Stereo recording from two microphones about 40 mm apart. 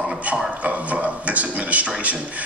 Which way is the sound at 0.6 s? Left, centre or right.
Right.